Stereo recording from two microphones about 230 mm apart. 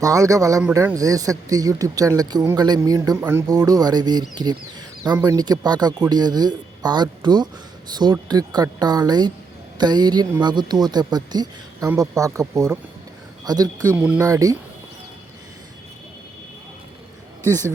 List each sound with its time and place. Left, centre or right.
0.0 s speech: centre